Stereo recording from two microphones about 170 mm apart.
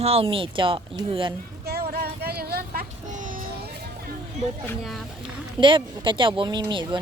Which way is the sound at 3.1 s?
50° right (ahead or behind).